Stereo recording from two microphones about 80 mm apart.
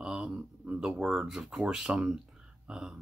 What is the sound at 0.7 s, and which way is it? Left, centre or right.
Speech, centre.